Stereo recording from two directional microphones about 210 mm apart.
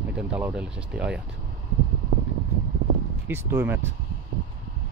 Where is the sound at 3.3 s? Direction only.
10° right (ahead or behind).